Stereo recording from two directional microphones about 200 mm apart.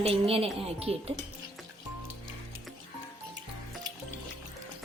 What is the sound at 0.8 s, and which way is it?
Speech, 30° right (ahead or behind).